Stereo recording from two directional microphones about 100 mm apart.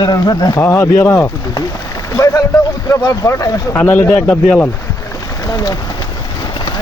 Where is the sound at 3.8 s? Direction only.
20° left (ahead or behind).